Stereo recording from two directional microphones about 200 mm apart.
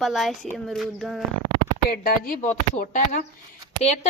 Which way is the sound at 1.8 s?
45° left (ahead or behind).